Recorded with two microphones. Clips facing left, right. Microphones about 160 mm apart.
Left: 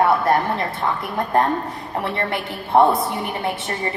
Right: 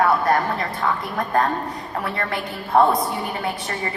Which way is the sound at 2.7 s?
25° left (ahead or behind).